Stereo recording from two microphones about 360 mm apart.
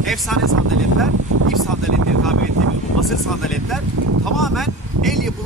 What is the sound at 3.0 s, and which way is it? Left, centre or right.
Speech, centre.